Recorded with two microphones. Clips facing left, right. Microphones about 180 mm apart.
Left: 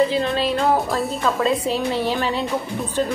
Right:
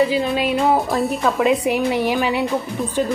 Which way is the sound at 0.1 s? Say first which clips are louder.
Right 2 dB; 5° right (ahead or behind).